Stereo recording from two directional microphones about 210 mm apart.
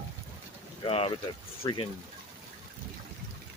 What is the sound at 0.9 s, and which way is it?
Speech, 25° left (ahead or behind).